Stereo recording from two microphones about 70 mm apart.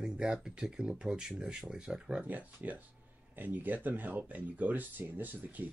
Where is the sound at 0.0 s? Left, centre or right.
Centre.